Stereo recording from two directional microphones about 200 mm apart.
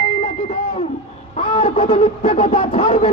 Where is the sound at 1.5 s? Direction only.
25° left (ahead or behind).